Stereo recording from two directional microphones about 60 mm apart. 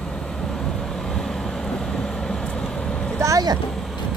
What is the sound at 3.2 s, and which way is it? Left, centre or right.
Vehicle, right.